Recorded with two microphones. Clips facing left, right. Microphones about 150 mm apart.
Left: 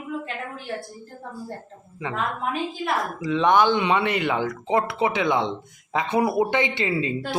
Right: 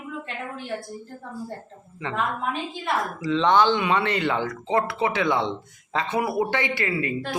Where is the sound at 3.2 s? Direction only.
15° left (ahead or behind).